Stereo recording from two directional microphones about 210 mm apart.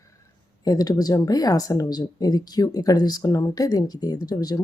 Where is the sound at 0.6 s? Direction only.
15° left (ahead or behind).